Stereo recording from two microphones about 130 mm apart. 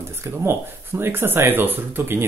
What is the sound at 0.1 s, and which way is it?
Speech, 20° right (ahead or behind).